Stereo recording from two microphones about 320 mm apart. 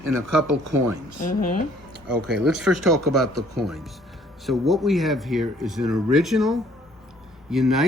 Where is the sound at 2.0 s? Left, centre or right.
Centre.